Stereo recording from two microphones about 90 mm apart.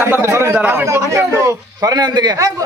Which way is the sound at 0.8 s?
35° right (ahead or behind).